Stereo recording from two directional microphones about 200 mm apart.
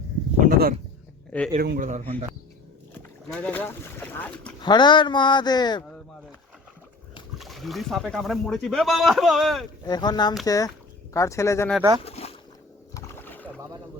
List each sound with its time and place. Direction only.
0.4 s a man's voice: 45° right (ahead or behind)
1.9 s speech: 35° right (ahead or behind)
3.3 s speech: 10° left (ahead or behind)
4.6 s speech: 20° left (ahead or behind)
7.3 s speech: centre (ahead or behind)
9.8 s speech: 20° left (ahead or behind)
12.0 s boat: 30° left (ahead or behind)
12.9 s rowboat: 15° left (ahead or behind)